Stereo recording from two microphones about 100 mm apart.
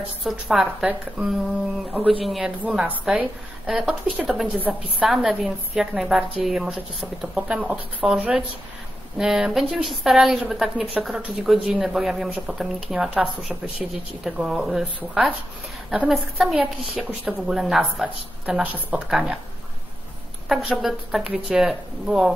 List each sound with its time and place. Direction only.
0.2 s a man's voice: centre (ahead or behind)
5.1 s a man's voice: 5° right (ahead or behind)
15.9 s a man's voice: 5° right (ahead or behind)
16.5 s a woman's voice: 15° right (ahead or behind)
20.4 s a man's voice: centre (ahead or behind)